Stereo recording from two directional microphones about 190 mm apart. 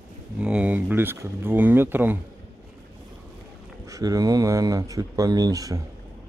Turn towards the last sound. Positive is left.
turn(degrees=-20)  # may be behind; listen again after turning